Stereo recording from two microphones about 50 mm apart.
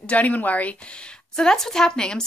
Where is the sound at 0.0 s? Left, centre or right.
Left.